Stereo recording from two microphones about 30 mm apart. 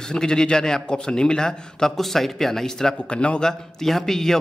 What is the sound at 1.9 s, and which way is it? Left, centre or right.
A man's voice, centre.